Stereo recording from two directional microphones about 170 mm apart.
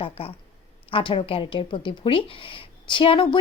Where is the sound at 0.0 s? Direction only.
35° left (ahead or behind).